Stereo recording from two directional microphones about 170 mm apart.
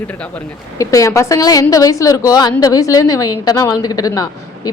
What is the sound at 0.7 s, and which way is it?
A woman's voice, 20° left (ahead or behind).